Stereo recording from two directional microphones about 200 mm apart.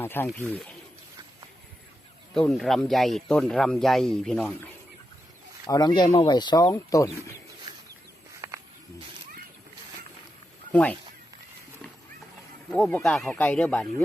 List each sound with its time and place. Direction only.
0.0 s speech: 10° left (ahead or behind)
2.3 s speech: centre (ahead or behind)
5.6 s speech: 20° left (ahead or behind)
8.4 s a sound: 15° right (ahead or behind)
10.7 s speech: 5° left (ahead or behind)
12.7 s speech: 5° left (ahead or behind)